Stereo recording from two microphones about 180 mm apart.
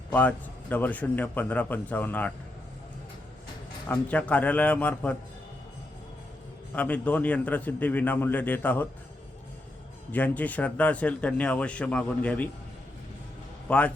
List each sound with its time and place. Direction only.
0.1 s speech: 10° left (ahead or behind)
3.8 s speech: 10° left (ahead or behind)
6.7 s speech: 10° left (ahead or behind)
10.1 s speech: 10° left (ahead or behind)
13.7 s a man's voice: 5° left (ahead or behind)